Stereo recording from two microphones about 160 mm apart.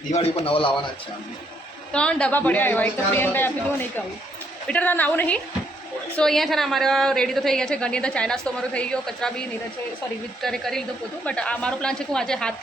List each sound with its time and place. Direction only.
0.1 s a man's voice: 40° left (ahead or behind)
1.9 s a woman's voice: 5° left (ahead or behind)
10.4 s a woman's voice: centre (ahead or behind)